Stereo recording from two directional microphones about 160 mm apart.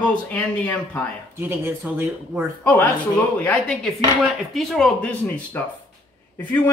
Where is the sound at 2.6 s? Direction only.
10° left (ahead or behind).